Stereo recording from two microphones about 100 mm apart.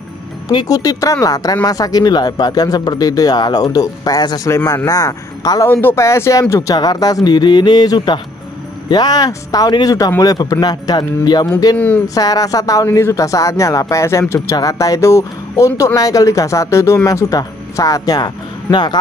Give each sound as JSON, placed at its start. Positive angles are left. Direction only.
{"t": 0.5, "sound": "speech", "side_deg": 40}
{"t": 4.5, "sound": "speech", "side_deg": 30}
{"t": 5.7, "sound": "speech", "side_deg": 20}
{"t": 6.5, "sound": "speech", "side_deg": 40}